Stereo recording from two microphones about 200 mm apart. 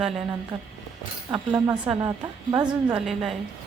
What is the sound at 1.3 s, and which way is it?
A woman's voice, 20° right (ahead or behind).